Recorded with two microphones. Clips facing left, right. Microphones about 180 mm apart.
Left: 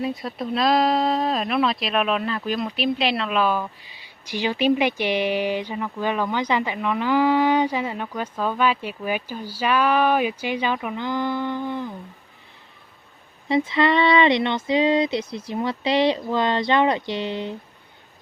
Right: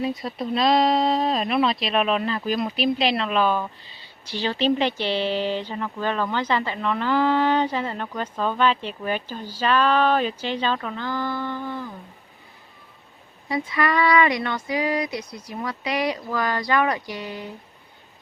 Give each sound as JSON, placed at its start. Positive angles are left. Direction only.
{"t": 0.0, "sound": "speech", "side_deg": 0}
{"t": 3.8, "sound": "speech", "side_deg": 15}
{"t": 13.5, "sound": "a sound", "side_deg": 25}